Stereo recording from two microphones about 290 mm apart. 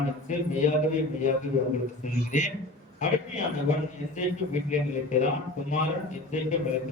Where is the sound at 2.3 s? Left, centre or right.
Left.